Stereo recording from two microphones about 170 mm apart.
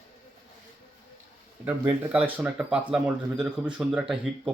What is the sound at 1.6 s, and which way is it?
Speech, 10° right (ahead or behind).